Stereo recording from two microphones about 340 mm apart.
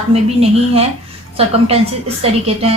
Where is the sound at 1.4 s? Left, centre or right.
Centre.